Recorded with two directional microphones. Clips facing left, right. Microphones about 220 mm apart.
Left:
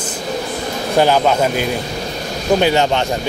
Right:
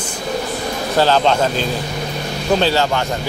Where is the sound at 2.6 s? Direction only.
20° left (ahead or behind).